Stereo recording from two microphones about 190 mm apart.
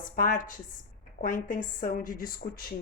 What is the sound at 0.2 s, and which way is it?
Speech, 45° left (ahead or behind).